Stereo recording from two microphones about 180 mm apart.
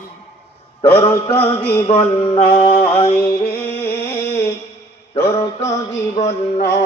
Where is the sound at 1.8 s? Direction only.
30° left (ahead or behind).